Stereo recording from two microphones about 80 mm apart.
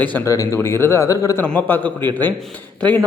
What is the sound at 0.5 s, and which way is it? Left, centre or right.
Speech, left.